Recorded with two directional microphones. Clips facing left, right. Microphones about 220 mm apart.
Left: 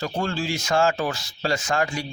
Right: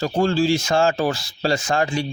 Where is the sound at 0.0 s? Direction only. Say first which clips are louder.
Right 8 dB; 30° right (ahead or behind).